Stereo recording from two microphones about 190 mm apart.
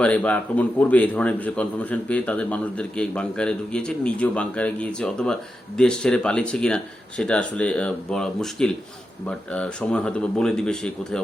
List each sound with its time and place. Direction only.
0.0 s a man's voice: 5° left (ahead or behind)